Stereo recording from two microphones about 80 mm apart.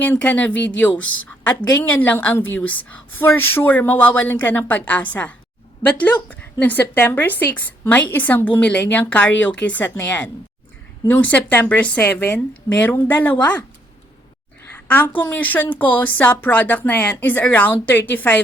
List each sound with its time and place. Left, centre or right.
0.0 s a woman's voice: left
14.8 s a woman's voice: left